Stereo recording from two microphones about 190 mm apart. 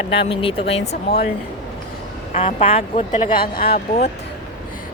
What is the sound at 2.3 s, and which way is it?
A woman's voice, 30° left (ahead or behind).